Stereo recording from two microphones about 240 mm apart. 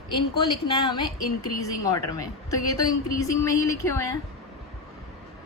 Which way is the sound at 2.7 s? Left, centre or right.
Centre.